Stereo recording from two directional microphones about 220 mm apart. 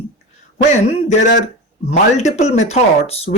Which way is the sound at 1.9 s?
30° left (ahead or behind).